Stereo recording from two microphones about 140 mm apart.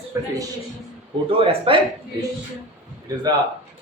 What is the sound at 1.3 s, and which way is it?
Speech, 40° right (ahead or behind).